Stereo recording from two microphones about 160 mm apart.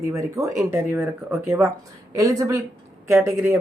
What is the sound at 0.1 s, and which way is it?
Speech, 20° right (ahead or behind).